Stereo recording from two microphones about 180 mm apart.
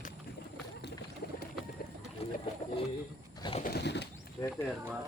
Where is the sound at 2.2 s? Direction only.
35° left (ahead or behind).